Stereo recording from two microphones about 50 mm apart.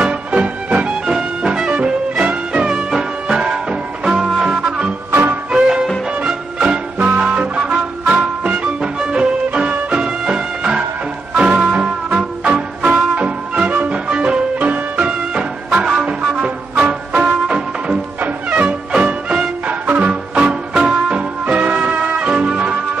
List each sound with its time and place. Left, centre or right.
0.0 s music: right
5.1 s music: right
5.5 s music: centre
13.7 s music: right
13.9 s music: right
14.6 s music: right